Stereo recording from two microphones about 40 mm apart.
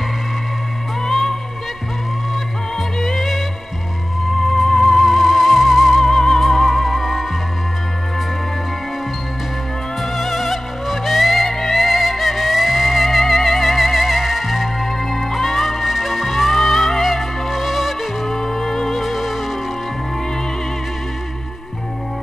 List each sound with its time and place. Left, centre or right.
1.0 s music: centre
3.0 s music: centre
4.4 s music: centre
10.1 s music: centre
19.0 s music: centre